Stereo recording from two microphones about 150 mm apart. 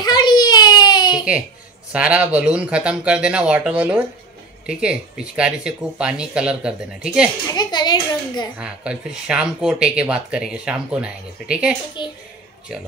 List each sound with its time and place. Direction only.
0.0 s baby cry: 30° left (ahead or behind)
1.9 s speech: 10° right (ahead or behind)
7.5 s a child's voice: 30° left (ahead or behind)
8.5 s speech: 5° right (ahead or behind)
12.0 s a woman's voice: 30° left (ahead or behind)